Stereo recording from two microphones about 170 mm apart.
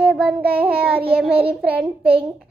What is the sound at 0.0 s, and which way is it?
Child singing, 5° right (ahead or behind).